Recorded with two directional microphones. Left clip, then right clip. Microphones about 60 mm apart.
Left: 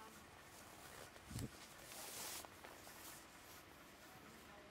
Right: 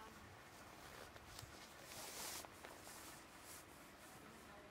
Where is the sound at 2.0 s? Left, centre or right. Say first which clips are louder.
Even; centre.